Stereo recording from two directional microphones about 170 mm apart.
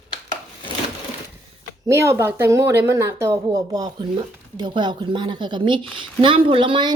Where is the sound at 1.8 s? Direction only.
15° right (ahead or behind).